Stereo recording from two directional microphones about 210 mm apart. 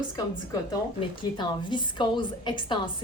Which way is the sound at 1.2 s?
20° left (ahead or behind).